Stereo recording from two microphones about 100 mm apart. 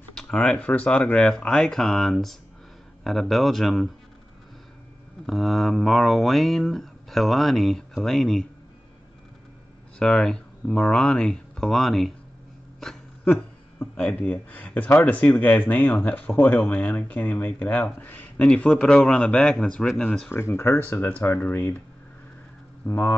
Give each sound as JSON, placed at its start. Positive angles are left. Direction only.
{"t": 0.1, "sound": "speech", "side_deg": 5}
{"t": 5.2, "sound": "speech", "side_deg": 0}
{"t": 9.9, "sound": "speech", "side_deg": 5}
{"t": 14.0, "sound": "speech", "side_deg": 15}
{"t": 18.4, "sound": "speech", "side_deg": 5}
{"t": 20.2, "sound": "speech", "side_deg": 25}
{"t": 22.8, "sound": "speech", "side_deg": 30}